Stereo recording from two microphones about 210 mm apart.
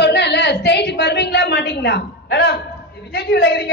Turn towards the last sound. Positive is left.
turn(degrees=55)  # may be behind; listen again after turning